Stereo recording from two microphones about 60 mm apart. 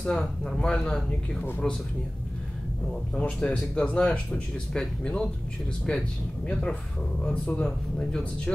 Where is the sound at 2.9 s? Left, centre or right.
Centre.